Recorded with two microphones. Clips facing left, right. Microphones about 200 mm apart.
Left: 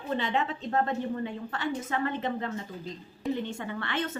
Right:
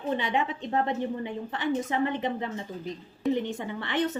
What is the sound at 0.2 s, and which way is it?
A woman's voice, 15° right (ahead or behind).